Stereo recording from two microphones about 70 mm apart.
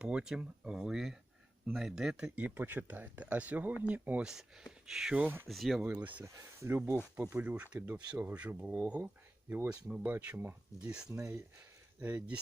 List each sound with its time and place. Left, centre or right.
0.0 s speech: centre
4.2 s speech: centre
5.1 s speech: right
5.5 s speech: centre
5.8 s speech: centre
6.2 s speech: right
7.2 s speech: centre
11.1 s speech: right
11.9 s speech: right